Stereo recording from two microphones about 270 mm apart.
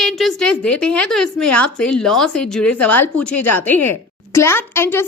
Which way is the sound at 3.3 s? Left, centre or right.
Left.